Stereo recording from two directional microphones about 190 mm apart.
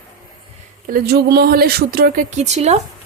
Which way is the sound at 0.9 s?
55° right (ahead or behind).